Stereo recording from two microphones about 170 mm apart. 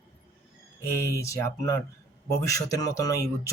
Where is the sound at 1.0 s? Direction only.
15° left (ahead or behind).